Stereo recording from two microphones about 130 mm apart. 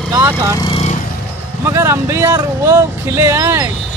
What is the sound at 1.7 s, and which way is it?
Speech, 20° right (ahead or behind).